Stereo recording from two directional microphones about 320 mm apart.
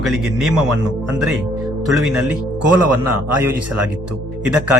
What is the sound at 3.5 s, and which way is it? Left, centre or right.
Speech, right.